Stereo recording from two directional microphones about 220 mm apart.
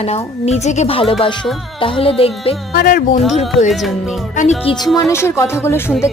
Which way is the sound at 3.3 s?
30° left (ahead or behind).